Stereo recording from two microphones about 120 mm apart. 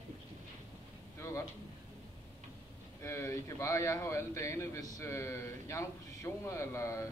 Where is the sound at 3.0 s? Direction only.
20° left (ahead or behind).